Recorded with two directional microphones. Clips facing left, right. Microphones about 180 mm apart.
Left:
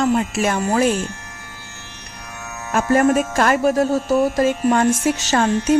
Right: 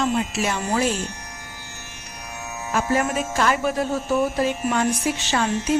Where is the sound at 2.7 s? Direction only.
50° left (ahead or behind).